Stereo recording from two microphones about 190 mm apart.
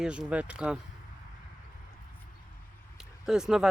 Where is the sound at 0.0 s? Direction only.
5° right (ahead or behind).